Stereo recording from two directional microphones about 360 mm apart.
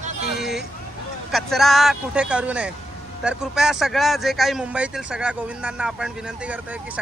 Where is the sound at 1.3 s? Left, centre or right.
Centre.